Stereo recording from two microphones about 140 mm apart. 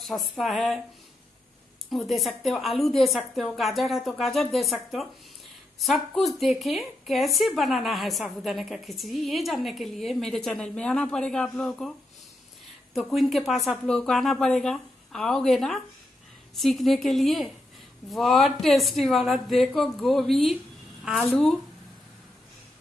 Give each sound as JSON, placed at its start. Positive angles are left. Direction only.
{"t": 0.0, "sound": "speech", "side_deg": 0}
{"t": 1.9, "sound": "speech", "side_deg": 0}
{"t": 12.9, "sound": "speech", "side_deg": 0}